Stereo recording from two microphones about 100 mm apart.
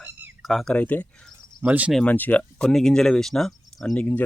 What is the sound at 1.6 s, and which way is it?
Speech, 15° right (ahead or behind).